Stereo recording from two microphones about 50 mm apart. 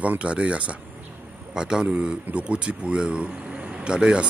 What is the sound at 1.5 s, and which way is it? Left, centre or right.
Speech, centre.